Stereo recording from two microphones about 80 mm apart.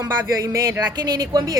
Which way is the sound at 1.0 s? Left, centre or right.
Right.